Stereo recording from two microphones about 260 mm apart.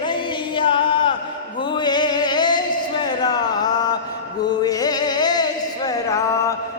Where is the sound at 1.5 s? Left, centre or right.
Centre.